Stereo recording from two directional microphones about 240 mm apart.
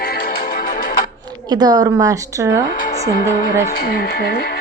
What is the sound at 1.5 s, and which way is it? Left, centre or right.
Speech, centre.